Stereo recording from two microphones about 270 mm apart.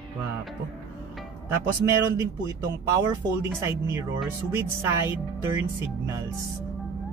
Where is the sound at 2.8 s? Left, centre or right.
Centre.